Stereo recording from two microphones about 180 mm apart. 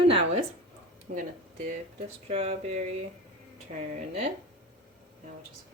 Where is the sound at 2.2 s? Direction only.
35° right (ahead or behind).